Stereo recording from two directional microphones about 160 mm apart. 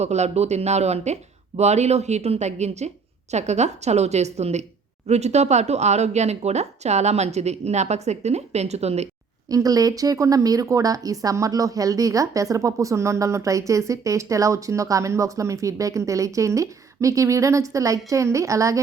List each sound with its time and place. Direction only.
0.0 s speech: 45° right (ahead or behind)
9.5 s speech: 20° right (ahead or behind)